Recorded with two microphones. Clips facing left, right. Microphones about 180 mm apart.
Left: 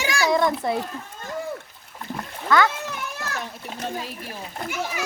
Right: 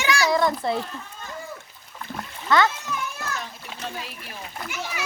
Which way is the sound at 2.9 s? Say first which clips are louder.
Right 1 dB; 65° left (ahead or behind).